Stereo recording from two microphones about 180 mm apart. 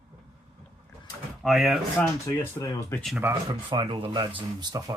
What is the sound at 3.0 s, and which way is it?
Speech, 5° right (ahead or behind).